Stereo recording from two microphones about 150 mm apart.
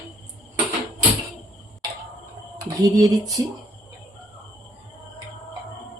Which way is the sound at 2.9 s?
25° right (ahead or behind).